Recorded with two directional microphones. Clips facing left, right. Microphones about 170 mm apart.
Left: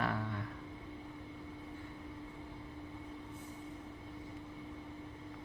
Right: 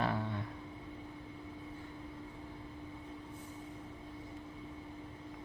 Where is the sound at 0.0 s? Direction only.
25° right (ahead or behind).